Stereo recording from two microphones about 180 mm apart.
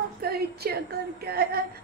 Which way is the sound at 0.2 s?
60° right (ahead or behind).